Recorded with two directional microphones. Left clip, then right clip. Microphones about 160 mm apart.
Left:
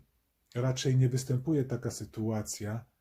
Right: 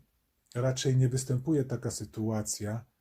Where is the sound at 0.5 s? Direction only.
40° right (ahead or behind).